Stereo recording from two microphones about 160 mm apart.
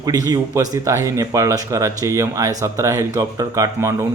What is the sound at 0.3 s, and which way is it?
Speech, 25° right (ahead or behind).